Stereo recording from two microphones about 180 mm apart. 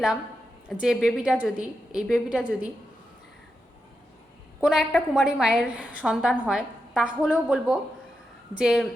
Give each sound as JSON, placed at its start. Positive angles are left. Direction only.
{"t": 0.7, "sound": "a woman's voice", "side_deg": 0}
{"t": 4.6, "sound": "a woman's voice", "side_deg": 0}